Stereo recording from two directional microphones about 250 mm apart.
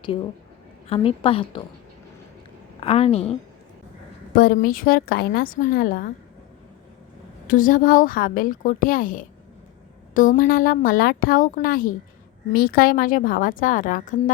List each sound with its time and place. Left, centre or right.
0.9 s a woman's voice: left
2.8 s a woman's voice: left
4.4 s a woman's voice: left
7.4 s a woman's voice: left